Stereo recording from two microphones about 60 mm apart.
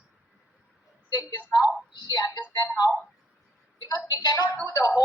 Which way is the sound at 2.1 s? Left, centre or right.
Left.